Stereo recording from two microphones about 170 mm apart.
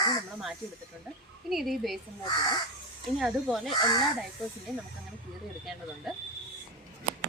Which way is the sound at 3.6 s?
25° left (ahead or behind).